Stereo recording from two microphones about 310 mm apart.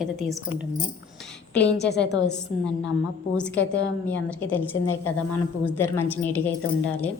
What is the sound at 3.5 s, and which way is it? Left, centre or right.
Speech, left.